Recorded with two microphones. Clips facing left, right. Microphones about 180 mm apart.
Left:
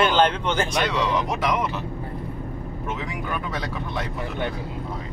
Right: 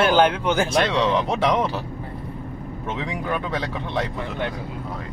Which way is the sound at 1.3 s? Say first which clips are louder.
Right 3 dB; 30° right (ahead or behind).